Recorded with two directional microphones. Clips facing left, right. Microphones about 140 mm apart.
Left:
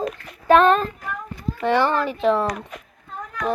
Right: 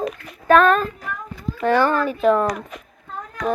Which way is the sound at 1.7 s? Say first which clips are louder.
Right 2 dB; 20° left (ahead or behind).